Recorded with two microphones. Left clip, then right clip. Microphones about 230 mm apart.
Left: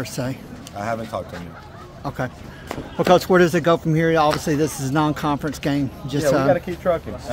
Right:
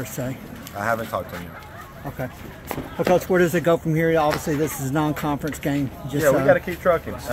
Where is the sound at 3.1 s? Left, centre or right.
Left.